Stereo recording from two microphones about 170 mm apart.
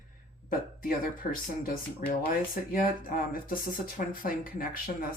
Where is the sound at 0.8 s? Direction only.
55° left (ahead or behind).